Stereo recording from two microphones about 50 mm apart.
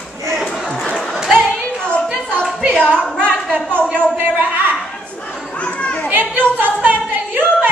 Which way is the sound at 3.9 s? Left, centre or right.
Right.